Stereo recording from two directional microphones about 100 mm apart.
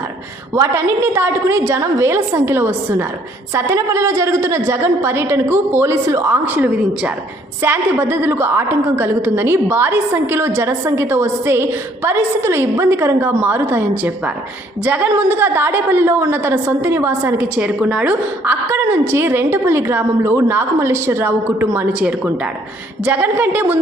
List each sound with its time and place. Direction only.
0.5 s a woman's voice: 30° right (ahead or behind)